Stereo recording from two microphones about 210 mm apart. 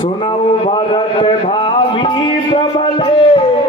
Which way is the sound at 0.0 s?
25° left (ahead or behind).